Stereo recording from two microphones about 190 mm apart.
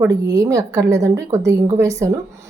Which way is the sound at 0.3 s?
20° right (ahead or behind).